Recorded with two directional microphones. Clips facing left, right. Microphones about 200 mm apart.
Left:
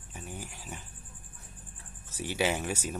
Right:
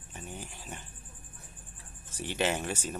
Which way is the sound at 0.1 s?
10° left (ahead or behind).